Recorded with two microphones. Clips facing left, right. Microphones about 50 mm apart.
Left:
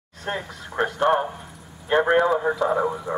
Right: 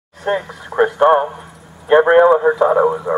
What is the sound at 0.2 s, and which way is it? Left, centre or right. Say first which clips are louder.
Speech: right 10 dB; centre.